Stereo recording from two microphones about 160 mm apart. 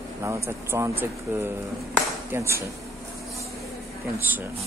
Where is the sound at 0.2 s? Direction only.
15° right (ahead or behind).